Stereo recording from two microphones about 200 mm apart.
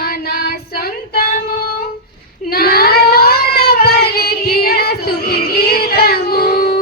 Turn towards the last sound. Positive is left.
turn(degrees=50)  # may be behind; listen again after turning